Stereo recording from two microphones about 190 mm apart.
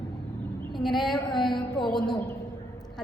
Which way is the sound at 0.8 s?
Centre (ahead or behind).